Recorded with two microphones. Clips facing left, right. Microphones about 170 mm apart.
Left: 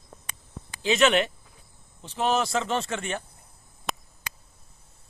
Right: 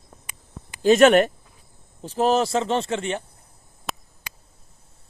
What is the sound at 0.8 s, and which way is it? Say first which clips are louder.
Speech: right 8 dB; 45° right (ahead or behind).